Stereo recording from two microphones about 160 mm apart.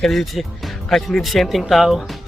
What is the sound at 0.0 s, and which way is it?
Speech, centre (ahead or behind).